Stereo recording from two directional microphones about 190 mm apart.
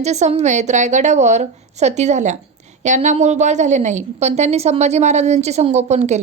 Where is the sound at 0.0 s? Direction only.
35° right (ahead or behind).